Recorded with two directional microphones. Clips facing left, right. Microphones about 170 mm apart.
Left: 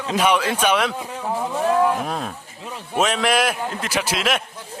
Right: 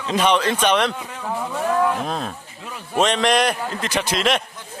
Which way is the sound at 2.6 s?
25° left (ahead or behind).